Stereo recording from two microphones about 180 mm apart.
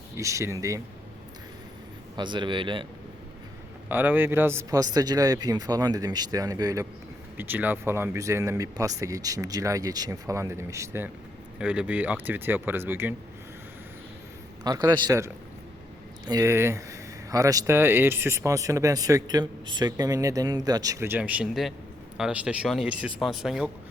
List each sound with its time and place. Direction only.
0.2 s speech: 15° right (ahead or behind)
2.1 s speech: 25° right (ahead or behind)
3.8 s speech: 10° right (ahead or behind)
14.6 s speech: 20° right (ahead or behind); by 23.6 s centre (ahead or behind)